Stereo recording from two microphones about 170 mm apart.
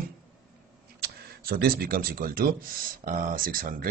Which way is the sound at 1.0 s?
65° right (ahead or behind).